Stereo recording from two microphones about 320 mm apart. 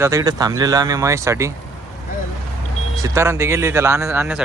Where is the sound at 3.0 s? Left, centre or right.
Centre.